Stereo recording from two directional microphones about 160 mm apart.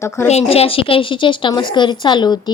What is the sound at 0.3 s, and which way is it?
A woman's voice, 40° left (ahead or behind).